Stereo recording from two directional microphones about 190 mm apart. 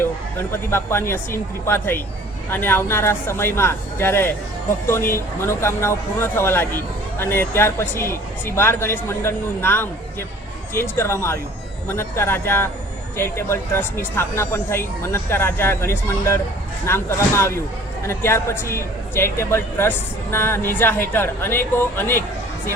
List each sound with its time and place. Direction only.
0.5 s speech: 15° left (ahead or behind)